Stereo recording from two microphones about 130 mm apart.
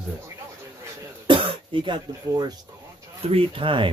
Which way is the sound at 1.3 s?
40° right (ahead or behind).